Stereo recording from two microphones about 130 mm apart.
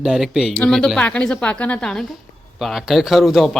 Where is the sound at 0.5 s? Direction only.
5° left (ahead or behind).